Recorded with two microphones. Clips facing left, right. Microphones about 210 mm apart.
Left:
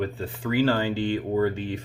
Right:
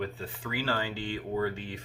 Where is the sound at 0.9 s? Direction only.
65° left (ahead or behind).